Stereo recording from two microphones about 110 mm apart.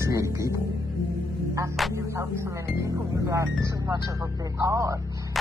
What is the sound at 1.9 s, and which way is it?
Speech, 25° right (ahead or behind).